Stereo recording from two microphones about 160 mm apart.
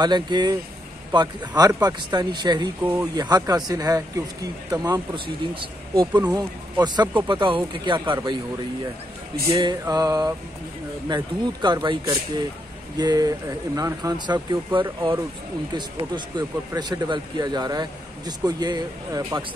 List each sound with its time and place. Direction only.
0.0 s speech: 25° right (ahead or behind)
2.8 s speech: 15° right (ahead or behind)
3.2 s speech: 25° right (ahead or behind)
9.5 s speech: 25° right (ahead or behind)